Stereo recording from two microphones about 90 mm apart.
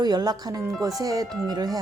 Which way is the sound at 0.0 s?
50° right (ahead or behind).